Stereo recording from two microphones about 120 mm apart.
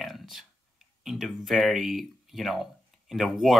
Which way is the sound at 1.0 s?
5° right (ahead or behind).